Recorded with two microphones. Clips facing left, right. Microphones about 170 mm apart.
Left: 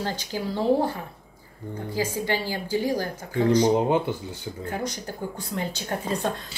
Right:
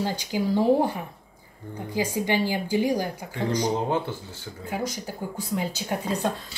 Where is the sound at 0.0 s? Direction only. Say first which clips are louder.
Right 3 dB; 15° right (ahead or behind).